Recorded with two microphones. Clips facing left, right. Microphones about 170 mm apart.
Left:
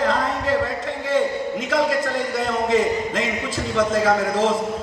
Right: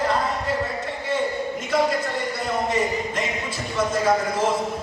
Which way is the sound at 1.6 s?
90° left.